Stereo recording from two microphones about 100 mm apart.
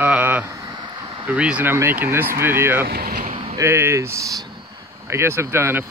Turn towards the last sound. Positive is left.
turn(degrees=-25)  # may be behind; listen again after turning